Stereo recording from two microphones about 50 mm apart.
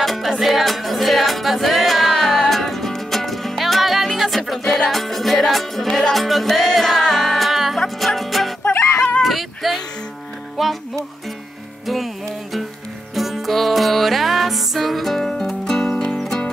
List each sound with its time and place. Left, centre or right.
0.0 s music: centre
4.6 s music: centre
8.9 s a sound: left
9.2 s a sound: centre
10.6 s music: centre
13.1 s music: centre